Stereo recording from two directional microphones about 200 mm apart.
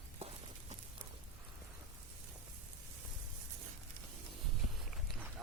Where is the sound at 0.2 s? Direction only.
30° right (ahead or behind).